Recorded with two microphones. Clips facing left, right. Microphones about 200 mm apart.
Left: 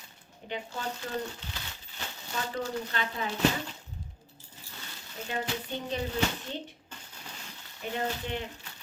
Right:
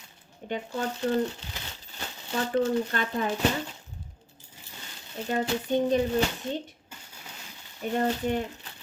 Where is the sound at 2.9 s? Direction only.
50° right (ahead or behind).